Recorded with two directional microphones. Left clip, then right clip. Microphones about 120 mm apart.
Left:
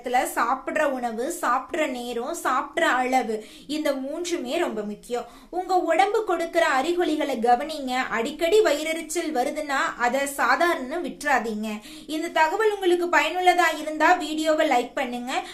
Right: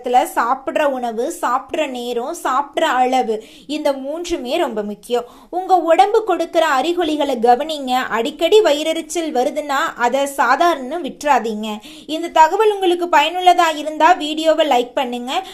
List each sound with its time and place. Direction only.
0.0 s a woman's voice: 45° right (ahead or behind)